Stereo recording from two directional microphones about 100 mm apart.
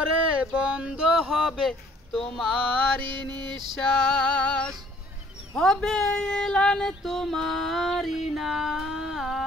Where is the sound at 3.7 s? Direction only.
5° left (ahead or behind).